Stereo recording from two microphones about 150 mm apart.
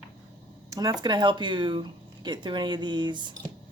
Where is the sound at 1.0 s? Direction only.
30° right (ahead or behind).